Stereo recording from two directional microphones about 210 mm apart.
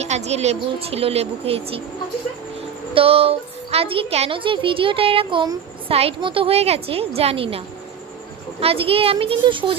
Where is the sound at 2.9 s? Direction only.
25° right (ahead or behind).